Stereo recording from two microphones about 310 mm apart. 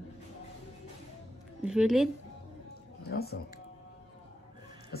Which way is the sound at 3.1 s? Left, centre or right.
Left.